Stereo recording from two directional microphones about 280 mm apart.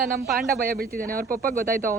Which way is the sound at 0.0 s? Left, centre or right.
Right.